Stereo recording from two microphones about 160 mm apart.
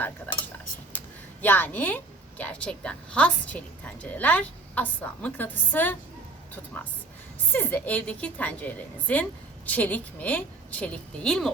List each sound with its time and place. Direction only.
0.9 s a sound: 10° left (ahead or behind)
2.4 s a woman's voice: 10° left (ahead or behind)
7.5 s a woman's voice: 10° left (ahead or behind)